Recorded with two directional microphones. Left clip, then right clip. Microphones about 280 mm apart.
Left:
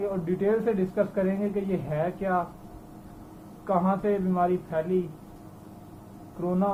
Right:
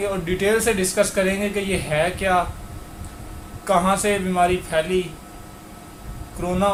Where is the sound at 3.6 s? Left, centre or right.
Right.